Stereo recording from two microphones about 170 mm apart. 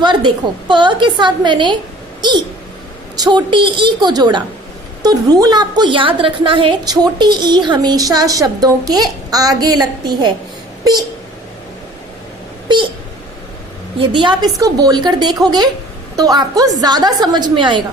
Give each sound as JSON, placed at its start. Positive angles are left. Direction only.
{"t": 0.0, "sound": "a woman's voice", "side_deg": -25}
{"t": 3.2, "sound": "a woman's voice", "side_deg": -25}
{"t": 14.0, "sound": "a woman's voice", "side_deg": -30}